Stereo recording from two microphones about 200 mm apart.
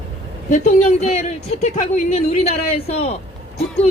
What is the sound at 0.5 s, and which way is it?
A woman's voice, 35° left (ahead or behind).